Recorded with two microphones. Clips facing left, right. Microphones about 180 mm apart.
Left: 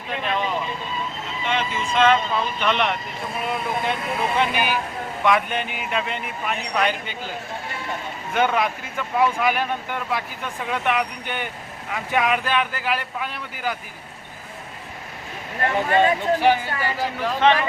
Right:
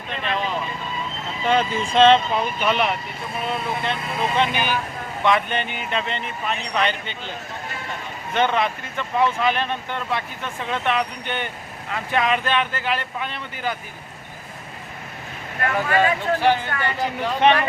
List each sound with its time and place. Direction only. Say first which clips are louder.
0.1 s speech: left 1 dB; centre (ahead or behind)
1.5 s speech: right 5 dB; 35° right (ahead or behind)
2.6 s speech: even; 5° right (ahead or behind)
4.4 s speech: right 1 dB; 10° left (ahead or behind)
15.6 s speech: left 1 dB; 25° left (ahead or behind); by 17.1 s 5° left (ahead or behind)
17.4 s speech: right 1 dB; 15° right (ahead or behind)